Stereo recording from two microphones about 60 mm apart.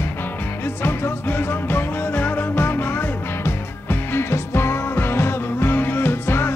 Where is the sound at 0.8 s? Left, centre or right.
Left.